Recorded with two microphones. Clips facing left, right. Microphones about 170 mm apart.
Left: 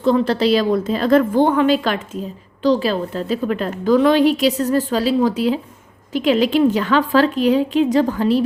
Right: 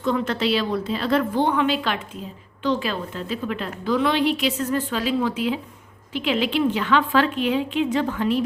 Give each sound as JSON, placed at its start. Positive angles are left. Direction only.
{"t": 0.0, "sound": "a woman's voice", "side_deg": 35}